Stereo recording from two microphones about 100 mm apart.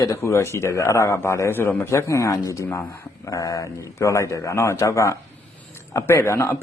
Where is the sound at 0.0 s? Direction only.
30° left (ahead or behind).